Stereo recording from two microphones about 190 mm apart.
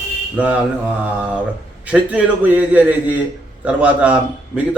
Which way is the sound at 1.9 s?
10° right (ahead or behind).